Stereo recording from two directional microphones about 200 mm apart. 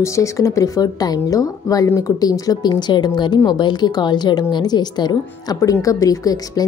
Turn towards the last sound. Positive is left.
turn(degrees=20)  # may be behind; listen again after turning